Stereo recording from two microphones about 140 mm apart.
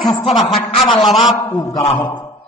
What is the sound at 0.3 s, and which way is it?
Speech, centre (ahead or behind).